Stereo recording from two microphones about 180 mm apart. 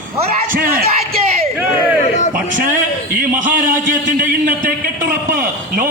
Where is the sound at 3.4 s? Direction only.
45° right (ahead or behind).